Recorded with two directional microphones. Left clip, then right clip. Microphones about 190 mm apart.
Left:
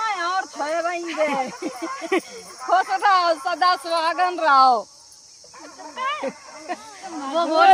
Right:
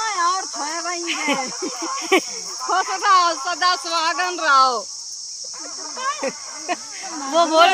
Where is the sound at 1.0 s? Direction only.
35° right (ahead or behind).